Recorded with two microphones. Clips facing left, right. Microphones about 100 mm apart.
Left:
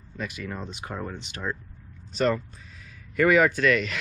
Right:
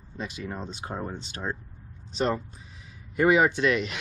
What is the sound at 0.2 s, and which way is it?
Speech, 25° right (ahead or behind).